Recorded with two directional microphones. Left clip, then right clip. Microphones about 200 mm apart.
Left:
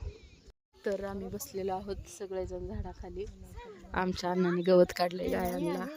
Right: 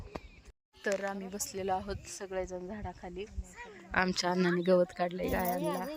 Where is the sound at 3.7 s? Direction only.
5° left (ahead or behind).